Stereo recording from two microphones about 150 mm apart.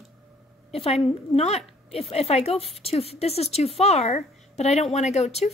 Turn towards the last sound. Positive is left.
turn(degrees=45)  # may be behind; listen again after turning